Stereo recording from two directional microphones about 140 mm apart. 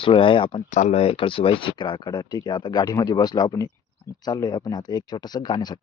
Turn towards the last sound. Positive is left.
turn(degrees=30)  # may be behind; listen again after turning